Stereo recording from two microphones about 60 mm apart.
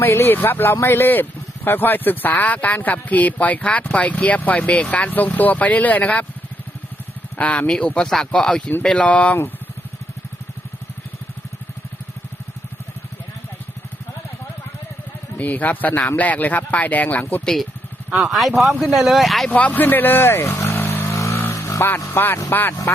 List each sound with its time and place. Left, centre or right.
0.0 s speech: left
7.3 s speech: left
15.4 s speech: left
17.4 s speech: centre
19.5 s speech: left
21.5 s vehicle: left
22.1 s speech: left